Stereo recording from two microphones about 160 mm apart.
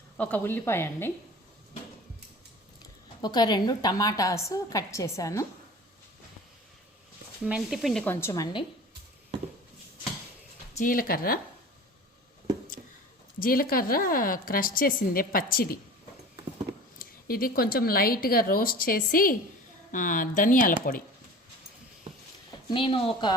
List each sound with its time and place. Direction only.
0.2 s a woman's voice: 10° left (ahead or behind)
3.2 s a woman's voice: 25° left (ahead or behind)
7.4 s speech: 5° right (ahead or behind)
8.0 s a woman's voice: 15° left (ahead or behind)
10.8 s a woman's voice: 60° left (ahead or behind)
13.4 s a woman's voice: 65° left (ahead or behind)
17.0 s a woman's voice: 65° left (ahead or behind)
22.7 s a woman's voice: 35° left (ahead or behind)